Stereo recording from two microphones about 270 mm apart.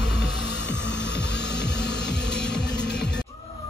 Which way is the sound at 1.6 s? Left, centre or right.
Centre.